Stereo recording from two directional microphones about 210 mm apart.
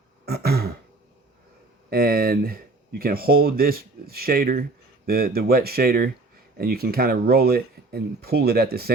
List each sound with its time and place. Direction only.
0.3 s throat clearing: 50° right (ahead or behind)
1.9 s speech: 45° right (ahead or behind)